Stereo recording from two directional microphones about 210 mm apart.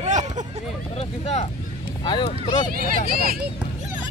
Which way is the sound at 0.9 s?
30° left (ahead or behind).